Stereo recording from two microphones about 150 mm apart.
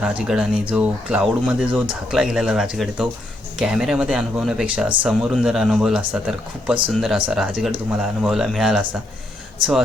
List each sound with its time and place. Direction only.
0.0 s speech: 5° right (ahead or behind)